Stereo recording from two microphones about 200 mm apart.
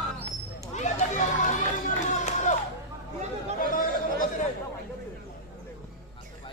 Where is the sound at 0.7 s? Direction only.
35° left (ahead or behind).